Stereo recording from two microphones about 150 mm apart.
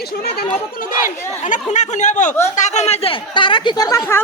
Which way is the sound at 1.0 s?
55° left (ahead or behind).